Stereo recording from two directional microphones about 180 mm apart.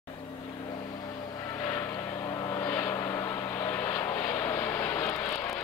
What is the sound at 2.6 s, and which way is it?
Vehicle, 15° left (ahead or behind).